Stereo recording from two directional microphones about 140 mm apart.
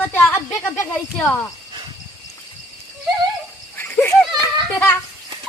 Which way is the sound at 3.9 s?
10° left (ahead or behind).